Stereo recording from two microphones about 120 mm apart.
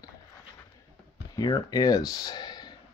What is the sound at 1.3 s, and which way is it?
Speech, 30° left (ahead or behind).